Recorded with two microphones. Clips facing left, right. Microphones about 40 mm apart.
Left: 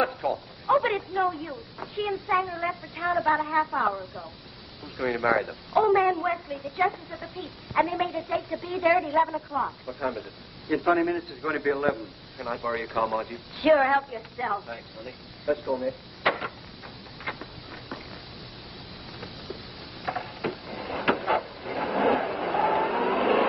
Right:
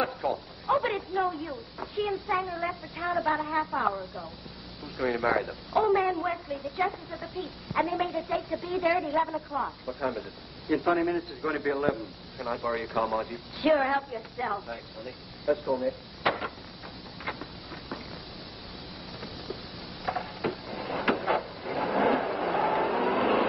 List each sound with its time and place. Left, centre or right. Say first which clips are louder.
0.2 s speech: left 2 dB; centre
11.0 s speech: left 2 dB; centre
16.2 s a sound: left 4 dB; centre
20.1 s mechanisms: even; centre
20.8 s a sound: left 2 dB; centre
21.7 s vehicle: left 1 dB; centre